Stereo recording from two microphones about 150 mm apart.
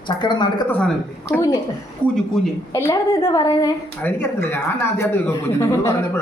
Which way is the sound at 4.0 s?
15° left (ahead or behind).